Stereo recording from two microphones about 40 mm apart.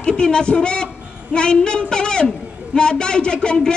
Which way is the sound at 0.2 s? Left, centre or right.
Left.